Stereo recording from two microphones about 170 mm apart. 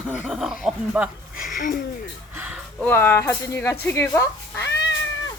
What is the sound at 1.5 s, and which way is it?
Speech, 55° left (ahead or behind).